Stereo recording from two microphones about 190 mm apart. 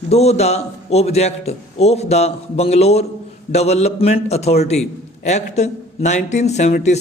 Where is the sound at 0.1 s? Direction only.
35° left (ahead or behind).